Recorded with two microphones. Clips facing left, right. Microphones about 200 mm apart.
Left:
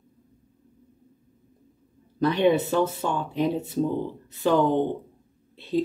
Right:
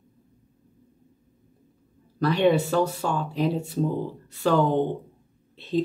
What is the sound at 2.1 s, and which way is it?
Speech, 20° left (ahead or behind).